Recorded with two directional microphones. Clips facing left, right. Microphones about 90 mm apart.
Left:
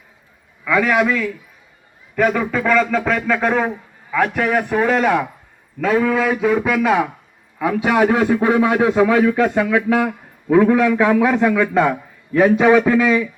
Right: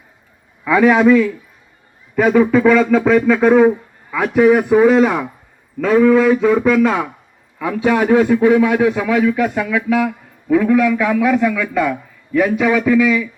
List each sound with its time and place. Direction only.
0.6 s a man's voice: 15° right (ahead or behind); by 13.2 s 35° left (ahead or behind)